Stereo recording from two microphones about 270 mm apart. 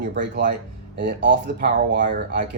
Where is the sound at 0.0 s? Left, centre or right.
Right.